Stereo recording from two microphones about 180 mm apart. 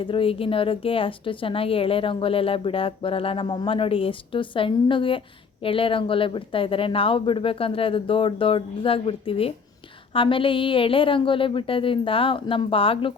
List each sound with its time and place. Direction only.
0.0 s speech: 30° left (ahead or behind)